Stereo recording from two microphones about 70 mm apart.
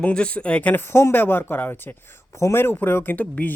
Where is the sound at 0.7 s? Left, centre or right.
Left.